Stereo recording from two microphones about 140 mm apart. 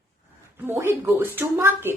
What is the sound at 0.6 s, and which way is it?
Speech, 20° right (ahead or behind).